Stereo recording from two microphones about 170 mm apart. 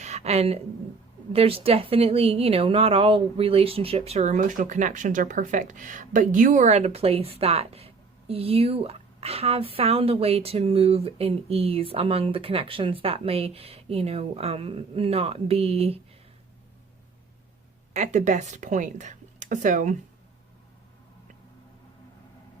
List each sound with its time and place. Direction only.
0.0 s a sound: 40° right (ahead or behind)
1.3 s speech: 35° right (ahead or behind)
17.9 s speech: 45° right (ahead or behind)